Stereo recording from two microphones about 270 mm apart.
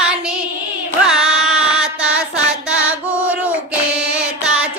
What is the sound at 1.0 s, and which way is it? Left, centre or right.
Music, centre.